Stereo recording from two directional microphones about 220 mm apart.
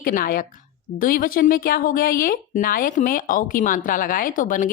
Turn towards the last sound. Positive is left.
turn(degrees=35)  # may be behind; listen again after turning